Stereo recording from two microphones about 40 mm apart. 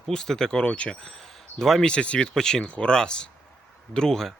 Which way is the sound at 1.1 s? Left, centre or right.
Centre.